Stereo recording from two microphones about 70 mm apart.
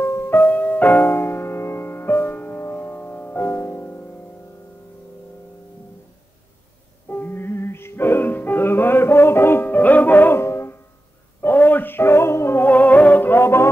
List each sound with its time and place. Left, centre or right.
0.0 s music: left
7.1 s music: left
10.4 s music: left
11.4 s music: left